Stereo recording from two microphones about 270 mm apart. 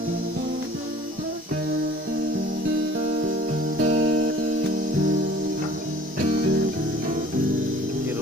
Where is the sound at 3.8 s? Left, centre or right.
Right.